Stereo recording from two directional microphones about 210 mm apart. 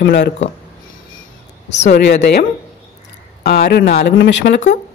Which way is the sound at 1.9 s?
55° left (ahead or behind).